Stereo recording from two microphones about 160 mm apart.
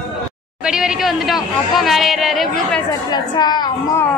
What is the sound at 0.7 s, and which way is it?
Speech, 5° right (ahead or behind).